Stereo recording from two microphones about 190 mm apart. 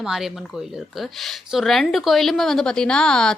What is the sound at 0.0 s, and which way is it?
Speech, centre (ahead or behind).